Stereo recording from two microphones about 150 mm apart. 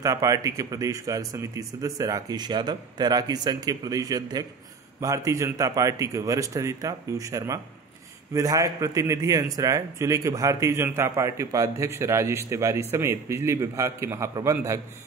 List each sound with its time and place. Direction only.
0.0 s a man's voice: 20° right (ahead or behind)